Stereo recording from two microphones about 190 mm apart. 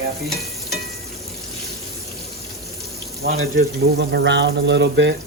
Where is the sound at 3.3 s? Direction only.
75° right (ahead or behind).